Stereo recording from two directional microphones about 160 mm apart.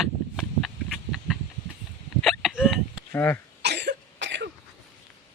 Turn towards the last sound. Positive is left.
turn(degrees=-90)